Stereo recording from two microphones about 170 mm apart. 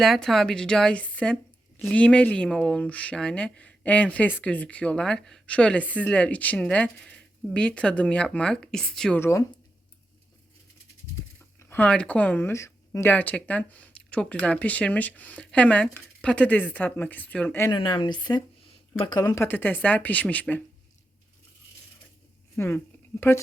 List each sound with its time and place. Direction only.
0.0 s a woman's voice: centre (ahead or behind)
11.7 s speech: 5° left (ahead or behind)
17.7 s speech: 25° left (ahead or behind); by 20.6 s 10° left (ahead or behind)
22.5 s speech: 15° left (ahead or behind)